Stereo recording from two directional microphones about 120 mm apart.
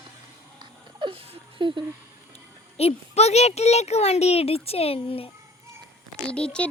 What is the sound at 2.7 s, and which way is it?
Speech, 60° left (ahead or behind).